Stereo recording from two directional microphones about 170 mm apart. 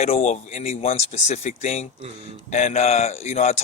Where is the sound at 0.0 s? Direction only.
40° left (ahead or behind).